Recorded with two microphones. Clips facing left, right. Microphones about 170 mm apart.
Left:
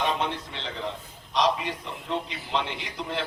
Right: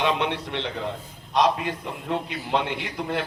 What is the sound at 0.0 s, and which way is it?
A man's voice, 70° right (ahead or behind).